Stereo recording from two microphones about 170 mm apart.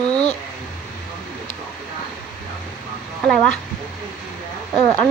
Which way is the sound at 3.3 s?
5° left (ahead or behind).